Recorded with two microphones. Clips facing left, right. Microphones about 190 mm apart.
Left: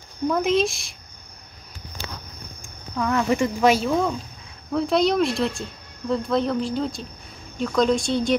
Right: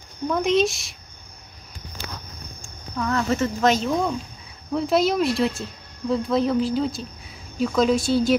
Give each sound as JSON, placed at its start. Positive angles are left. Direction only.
{"t": 0.3, "sound": "speech", "side_deg": 0}
{"t": 2.6, "sound": "speech", "side_deg": 15}